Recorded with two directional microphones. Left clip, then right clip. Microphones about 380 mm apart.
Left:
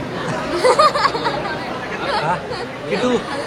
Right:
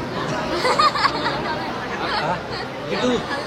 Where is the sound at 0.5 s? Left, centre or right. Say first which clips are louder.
Left 5 dB; centre.